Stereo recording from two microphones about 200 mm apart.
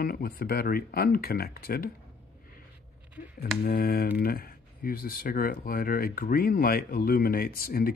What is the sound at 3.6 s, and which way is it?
Speech, 50° left (ahead or behind).